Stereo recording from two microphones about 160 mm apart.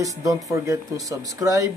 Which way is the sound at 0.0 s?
20° right (ahead or behind).